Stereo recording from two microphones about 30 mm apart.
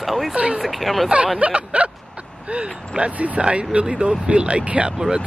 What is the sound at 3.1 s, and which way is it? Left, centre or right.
Speech, right.